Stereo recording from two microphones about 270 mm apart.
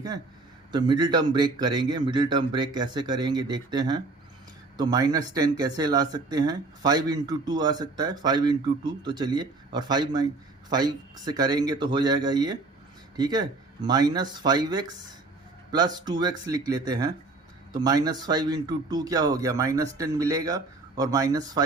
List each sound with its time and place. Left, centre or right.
0.7 s speech: centre